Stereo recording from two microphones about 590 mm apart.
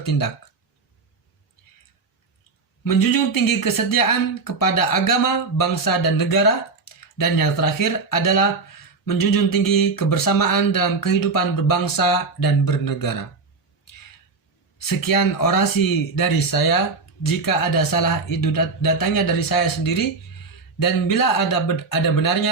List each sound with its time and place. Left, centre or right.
0.0 s speech: left
2.8 s speech: left
14.8 s speech: left